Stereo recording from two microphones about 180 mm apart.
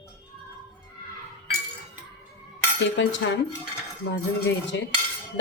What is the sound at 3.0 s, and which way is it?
Speech, 90° left.